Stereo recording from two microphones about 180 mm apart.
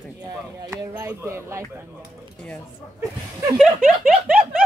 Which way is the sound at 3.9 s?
5° right (ahead or behind).